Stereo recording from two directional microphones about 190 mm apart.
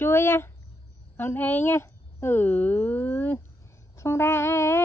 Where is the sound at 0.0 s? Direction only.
10° left (ahead or behind).